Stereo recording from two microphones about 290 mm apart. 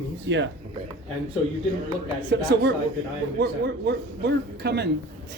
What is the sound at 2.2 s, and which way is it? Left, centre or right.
Speech, right.